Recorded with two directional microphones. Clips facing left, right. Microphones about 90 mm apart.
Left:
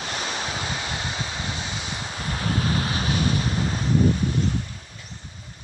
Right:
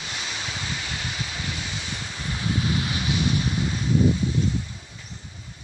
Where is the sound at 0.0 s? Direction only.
45° left (ahead or behind); by 1.9 s 25° left (ahead or behind).